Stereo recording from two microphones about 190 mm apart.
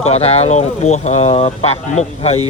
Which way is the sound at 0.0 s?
35° left (ahead or behind).